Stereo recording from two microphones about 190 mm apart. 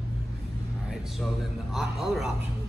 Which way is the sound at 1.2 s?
Centre (ahead or behind).